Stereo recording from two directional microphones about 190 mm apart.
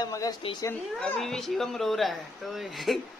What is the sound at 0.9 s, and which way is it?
Speech, centre (ahead or behind).